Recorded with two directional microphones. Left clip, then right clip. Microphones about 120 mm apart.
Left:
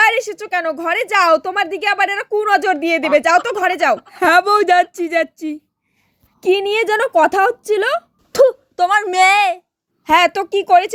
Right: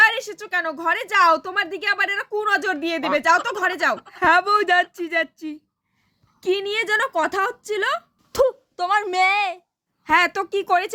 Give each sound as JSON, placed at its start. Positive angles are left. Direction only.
{"t": 0.0, "sound": "a woman's voice", "side_deg": 25}
{"t": 8.4, "sound": "a woman's voice", "side_deg": 35}
{"t": 9.2, "sound": "speech", "side_deg": 45}
{"t": 10.0, "sound": "a woman's voice", "side_deg": 25}